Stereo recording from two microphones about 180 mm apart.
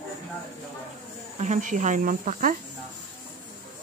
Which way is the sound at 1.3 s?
40° right (ahead or behind).